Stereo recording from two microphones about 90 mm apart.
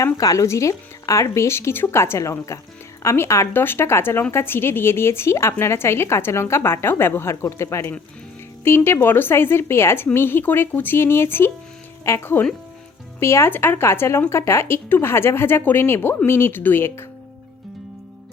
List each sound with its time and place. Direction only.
0.0 s speech: 40° left (ahead or behind); by 17.1 s 25° left (ahead or behind)